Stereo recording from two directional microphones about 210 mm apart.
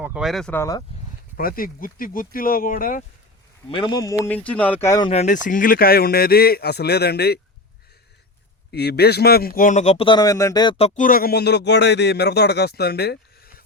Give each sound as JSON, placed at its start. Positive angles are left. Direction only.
{"t": 0.0, "sound": "speech", "side_deg": -5}
{"t": 1.4, "sound": "speech", "side_deg": 45}
{"t": 3.7, "sound": "speech", "side_deg": 20}
{"t": 5.2, "sound": "speech", "side_deg": 40}
{"t": 8.7, "sound": "speech", "side_deg": 50}